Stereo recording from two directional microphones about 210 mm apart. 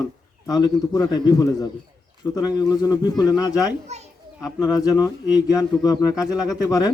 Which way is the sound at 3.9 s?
30° right (ahead or behind).